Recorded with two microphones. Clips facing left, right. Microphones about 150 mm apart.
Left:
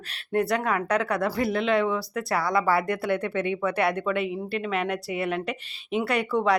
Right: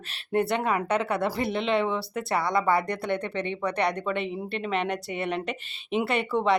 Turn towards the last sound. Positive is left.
turn(degrees=0)  # may be behind; listen again after turning